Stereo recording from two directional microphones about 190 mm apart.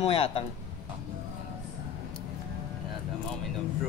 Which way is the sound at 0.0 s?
30° left (ahead or behind).